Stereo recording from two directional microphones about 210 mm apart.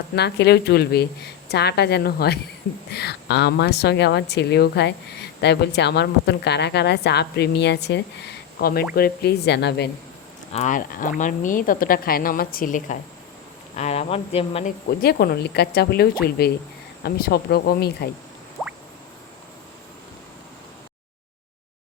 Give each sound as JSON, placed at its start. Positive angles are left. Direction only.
{"t": 0.2, "sound": "speech", "side_deg": 55}
{"t": 10.5, "sound": "a woman's voice", "side_deg": 35}
{"t": 14.8, "sound": "speech", "side_deg": 50}